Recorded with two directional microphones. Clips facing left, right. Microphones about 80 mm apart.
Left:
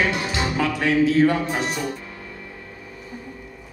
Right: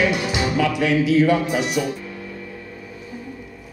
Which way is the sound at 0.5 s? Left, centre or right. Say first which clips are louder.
Right 1 dB; left.